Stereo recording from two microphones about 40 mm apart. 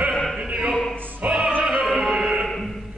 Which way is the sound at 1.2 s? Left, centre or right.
Right.